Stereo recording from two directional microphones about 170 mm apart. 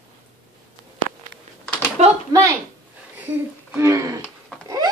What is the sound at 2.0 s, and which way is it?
Speech, 40° right (ahead or behind).